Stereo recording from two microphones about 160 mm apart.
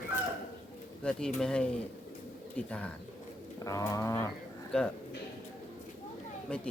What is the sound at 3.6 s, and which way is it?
Speech, 20° left (ahead or behind).